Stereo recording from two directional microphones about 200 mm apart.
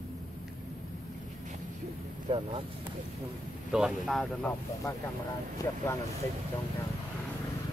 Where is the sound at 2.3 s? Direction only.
30° right (ahead or behind).